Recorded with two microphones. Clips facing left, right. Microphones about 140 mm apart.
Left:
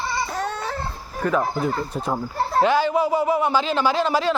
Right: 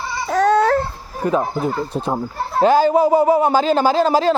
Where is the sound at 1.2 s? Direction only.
25° right (ahead or behind).